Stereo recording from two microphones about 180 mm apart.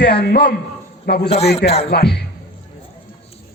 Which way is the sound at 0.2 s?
60° left (ahead or behind).